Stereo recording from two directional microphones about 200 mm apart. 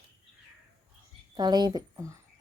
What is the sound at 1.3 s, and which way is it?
Speech, 20° right (ahead or behind).